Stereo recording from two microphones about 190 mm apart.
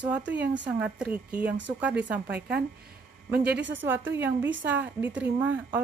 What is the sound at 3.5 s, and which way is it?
Speech, 70° right (ahead or behind).